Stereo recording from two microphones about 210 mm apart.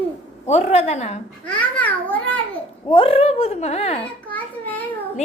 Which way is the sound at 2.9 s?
25° left (ahead or behind).